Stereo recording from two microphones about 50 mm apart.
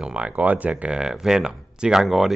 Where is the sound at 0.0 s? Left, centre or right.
Right.